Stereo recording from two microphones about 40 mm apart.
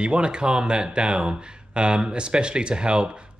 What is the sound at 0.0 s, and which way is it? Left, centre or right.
Speech, right.